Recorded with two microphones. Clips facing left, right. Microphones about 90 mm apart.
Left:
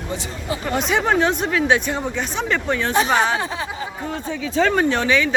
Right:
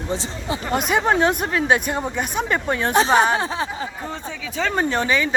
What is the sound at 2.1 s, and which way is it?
Speech, 10° right (ahead or behind).